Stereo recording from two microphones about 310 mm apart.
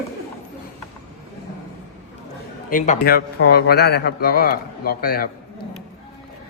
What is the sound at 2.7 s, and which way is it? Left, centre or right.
A man's voice, left.